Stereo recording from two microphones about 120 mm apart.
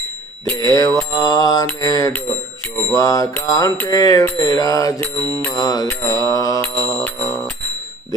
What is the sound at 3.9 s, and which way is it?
Bicycle bell, 30° left (ahead or behind).